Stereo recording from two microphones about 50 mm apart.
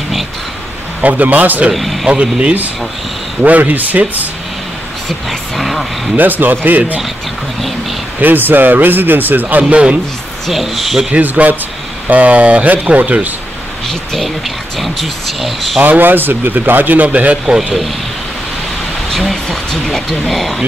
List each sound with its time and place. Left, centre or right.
1.0 s a man's voice: right
1.7 s speech: centre
2.0 s speech: right
3.4 s a man's voice: right
5.6 s speech: centre
6.1 s a man's voice: right
8.2 s a man's voice: right
9.6 s speech: right
10.5 s speech: centre
11.1 s a man's voice: right
13.8 s speech: centre
15.8 s a man's voice: right
19.4 s speech: centre